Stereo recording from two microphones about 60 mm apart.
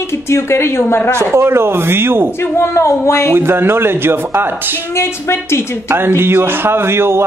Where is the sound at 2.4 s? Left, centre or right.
Left.